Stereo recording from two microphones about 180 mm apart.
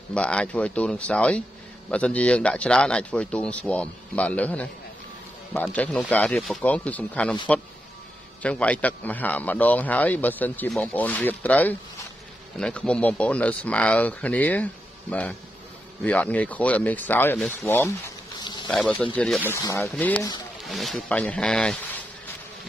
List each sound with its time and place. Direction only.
0.1 s a man's voice: 5° left (ahead or behind)
5.8 s a man's voice: 10° left (ahead or behind)
8.4 s a man's voice: 10° left (ahead or behind)
18.7 s speech: 5° left (ahead or behind)
19.5 s a man's voice: 15° left (ahead or behind)